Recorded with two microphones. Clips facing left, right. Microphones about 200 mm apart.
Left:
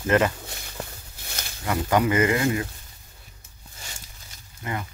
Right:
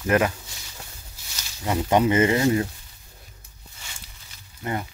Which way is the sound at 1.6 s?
25° right (ahead or behind).